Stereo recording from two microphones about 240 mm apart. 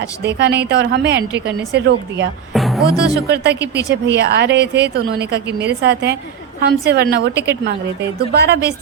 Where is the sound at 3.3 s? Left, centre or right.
Right.